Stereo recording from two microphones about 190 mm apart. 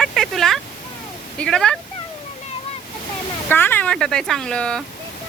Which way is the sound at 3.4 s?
10° left (ahead or behind).